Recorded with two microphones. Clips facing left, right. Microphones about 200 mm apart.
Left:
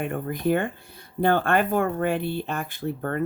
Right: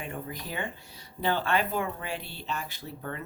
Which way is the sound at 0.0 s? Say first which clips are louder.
Left 11 dB; 55° left (ahead or behind).